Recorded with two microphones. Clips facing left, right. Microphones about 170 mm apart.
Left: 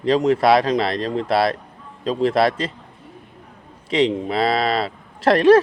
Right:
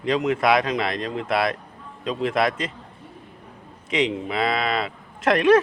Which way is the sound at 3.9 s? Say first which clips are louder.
Left 5 dB; 35° left (ahead or behind).